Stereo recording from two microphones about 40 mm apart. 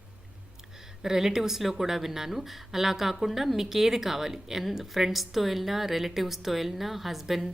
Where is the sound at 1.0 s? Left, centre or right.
Centre.